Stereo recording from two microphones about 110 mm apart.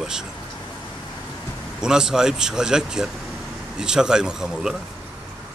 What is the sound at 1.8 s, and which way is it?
Speech, 5° right (ahead or behind).